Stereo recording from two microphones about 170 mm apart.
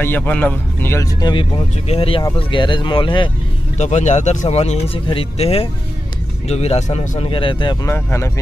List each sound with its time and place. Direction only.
0.0 s speech: 10° left (ahead or behind)
1.3 s speech: 30° left (ahead or behind)
3.7 s speech: 45° left (ahead or behind)
7.8 s speech: 15° left (ahead or behind)